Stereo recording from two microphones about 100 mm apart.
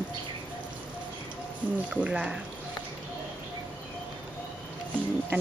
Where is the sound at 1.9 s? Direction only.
10° right (ahead or behind).